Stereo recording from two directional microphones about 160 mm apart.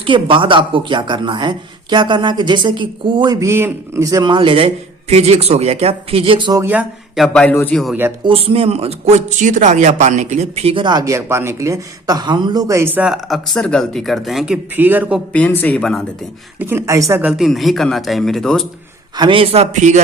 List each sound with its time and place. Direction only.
0.0 s speech: 30° right (ahead or behind)
3.4 s a man's voice: 15° right (ahead or behind)
6.6 s speech: 10° right (ahead or behind)
7.2 s speech: 5° left (ahead or behind)
8.2 s speech: 35° right (ahead or behind); by 15.2 s 10° right (ahead or behind)
15.3 s speech: 10° left (ahead or behind)
16.6 s speech: 15° right (ahead or behind); by 18.7 s centre (ahead or behind)
19.1 s a man's voice: 30° right (ahead or behind)